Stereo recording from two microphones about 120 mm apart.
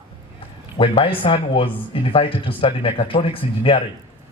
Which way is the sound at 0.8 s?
45° left (ahead or behind).